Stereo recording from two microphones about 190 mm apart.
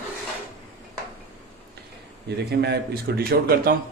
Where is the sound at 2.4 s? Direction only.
60° right (ahead or behind).